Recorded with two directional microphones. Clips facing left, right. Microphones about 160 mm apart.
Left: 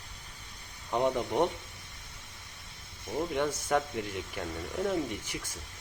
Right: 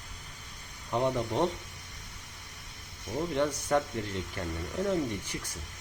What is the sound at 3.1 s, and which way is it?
Speech, 25° left (ahead or behind).